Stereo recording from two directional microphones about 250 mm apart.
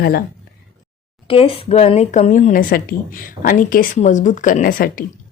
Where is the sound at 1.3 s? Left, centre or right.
Left.